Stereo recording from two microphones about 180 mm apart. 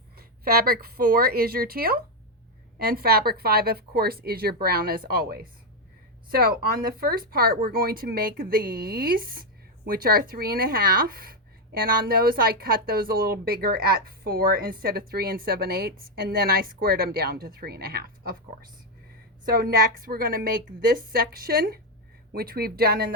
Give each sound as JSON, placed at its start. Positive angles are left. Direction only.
{"t": 0.2, "sound": "speech", "side_deg": -55}
{"t": 19.5, "sound": "speech", "side_deg": -55}